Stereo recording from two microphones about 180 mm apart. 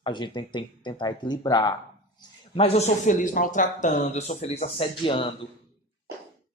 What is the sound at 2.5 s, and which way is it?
Speech, 35° left (ahead or behind).